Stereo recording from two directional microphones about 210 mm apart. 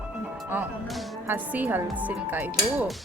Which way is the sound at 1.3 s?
10° right (ahead or behind).